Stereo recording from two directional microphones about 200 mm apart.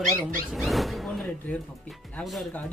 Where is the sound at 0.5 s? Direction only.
Centre (ahead or behind).